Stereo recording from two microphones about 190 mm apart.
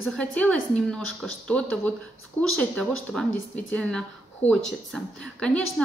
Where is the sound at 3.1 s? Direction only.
5° left (ahead or behind).